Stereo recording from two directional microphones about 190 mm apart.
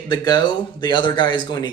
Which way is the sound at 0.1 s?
20° left (ahead or behind).